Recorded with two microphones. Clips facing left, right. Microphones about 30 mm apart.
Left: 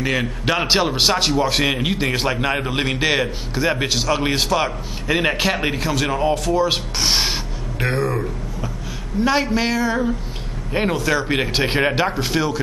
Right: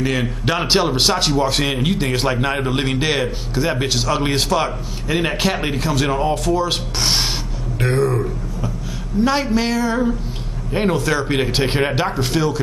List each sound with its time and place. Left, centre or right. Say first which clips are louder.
0.0 s a man's voice: right 1 dB; centre